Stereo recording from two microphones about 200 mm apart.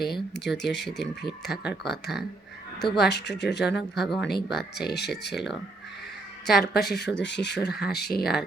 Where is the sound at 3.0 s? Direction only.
55° left (ahead or behind).